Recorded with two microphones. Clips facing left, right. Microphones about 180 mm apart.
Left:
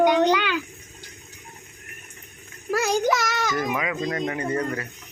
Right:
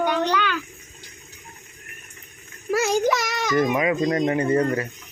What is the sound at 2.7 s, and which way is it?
Speech, centre (ahead or behind).